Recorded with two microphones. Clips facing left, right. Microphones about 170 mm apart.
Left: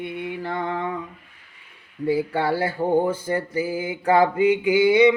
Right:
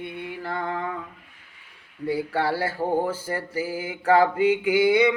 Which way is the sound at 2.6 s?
15° left (ahead or behind).